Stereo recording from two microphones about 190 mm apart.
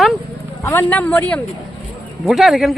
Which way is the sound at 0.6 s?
15° left (ahead or behind).